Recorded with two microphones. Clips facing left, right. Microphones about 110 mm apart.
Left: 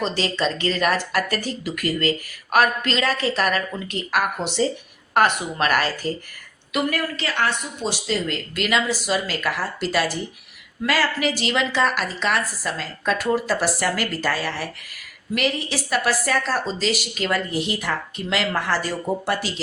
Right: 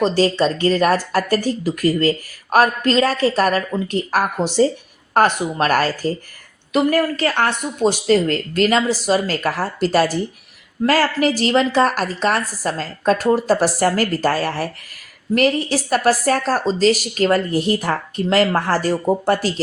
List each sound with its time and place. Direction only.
0.0 s speech: 40° right (ahead or behind)